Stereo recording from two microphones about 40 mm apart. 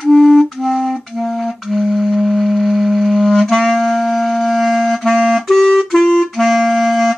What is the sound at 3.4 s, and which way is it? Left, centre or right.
Clarinet, centre.